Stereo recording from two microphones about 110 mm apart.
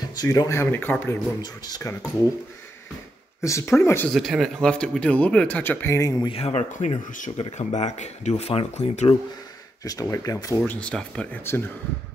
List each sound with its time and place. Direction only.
0.2 s speech: 35° left (ahead or behind); by 1.1 s 20° left (ahead or behind)
1.4 s speech: 40° left (ahead or behind)
3.3 s speech: 25° left (ahead or behind)
4.1 s speech: centre (ahead or behind); by 5.9 s 20° left (ahead or behind)
5.9 s speech: 30° left (ahead or behind)
6.2 s speech: 65° left (ahead or behind); by 9.1 s 80° left
9.8 s speech: 30° left (ahead or behind)
10.7 s speech: 10° left (ahead or behind)
11.5 s speech: 25° left (ahead or behind)